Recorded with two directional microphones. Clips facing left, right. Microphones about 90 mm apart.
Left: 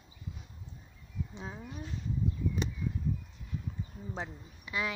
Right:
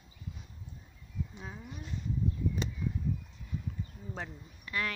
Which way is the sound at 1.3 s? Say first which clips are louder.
Left 2 dB; 25° left (ahead or behind).